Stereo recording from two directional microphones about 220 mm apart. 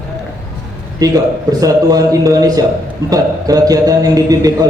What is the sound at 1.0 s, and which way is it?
A man's voice, 15° right (ahead or behind).